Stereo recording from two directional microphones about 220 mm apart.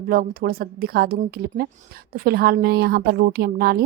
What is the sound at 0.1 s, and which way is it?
Speech, 40° right (ahead or behind).